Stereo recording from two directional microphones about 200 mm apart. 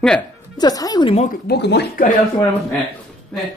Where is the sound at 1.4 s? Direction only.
55° left (ahead or behind).